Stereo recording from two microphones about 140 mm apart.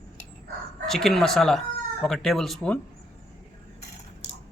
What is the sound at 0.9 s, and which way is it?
Speech, centre (ahead or behind).